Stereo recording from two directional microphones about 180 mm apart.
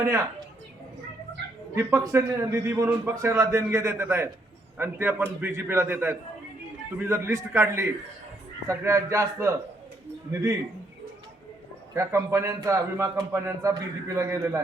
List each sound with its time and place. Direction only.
1.7 s a man's voice: 15° right (ahead or behind)
11.9 s a man's voice: 15° right (ahead or behind)